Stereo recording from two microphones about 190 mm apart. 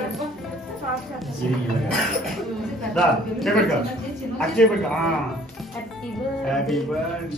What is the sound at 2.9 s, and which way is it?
A man's voice, centre (ahead or behind).